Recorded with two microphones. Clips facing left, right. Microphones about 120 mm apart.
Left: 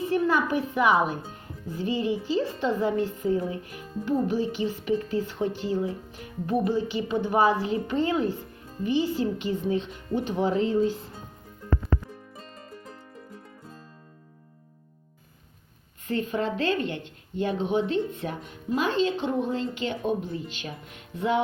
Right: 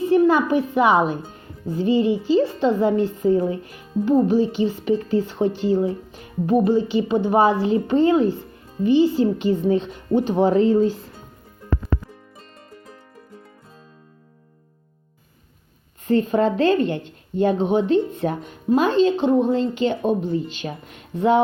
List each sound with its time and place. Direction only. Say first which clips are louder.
0.1 s a woman's voice: right 8 dB; 25° right (ahead or behind); by 10.9 s 40° right (ahead or behind)
16.0 s speech: right 9 dB; 35° right (ahead or behind)